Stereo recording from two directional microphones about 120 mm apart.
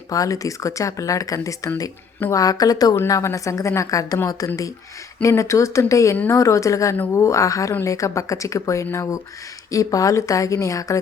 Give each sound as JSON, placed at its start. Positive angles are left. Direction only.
{"t": 0.1, "sound": "a woman's voice", "side_deg": 30}